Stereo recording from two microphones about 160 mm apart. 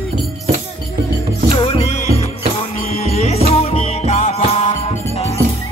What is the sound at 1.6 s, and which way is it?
Music, 35° left (ahead or behind).